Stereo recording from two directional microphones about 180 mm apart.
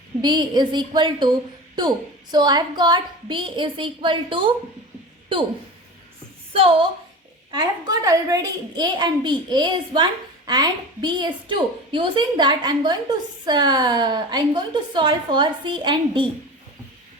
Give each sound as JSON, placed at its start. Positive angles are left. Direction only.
{"t": 0.2, "sound": "a child's voice", "side_deg": -25}
{"t": 6.5, "sound": "a woman's voice", "side_deg": -30}
{"t": 7.5, "sound": "a child's voice", "side_deg": -20}